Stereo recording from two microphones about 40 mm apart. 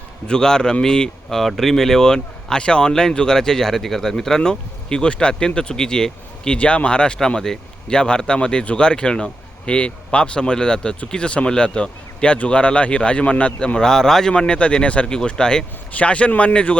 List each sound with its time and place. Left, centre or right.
0.3 s speech: centre
1.3 s speech: centre
6.6 s speech: left
13.7 s speech: centre
14.3 s speech: left
15.9 s speech: left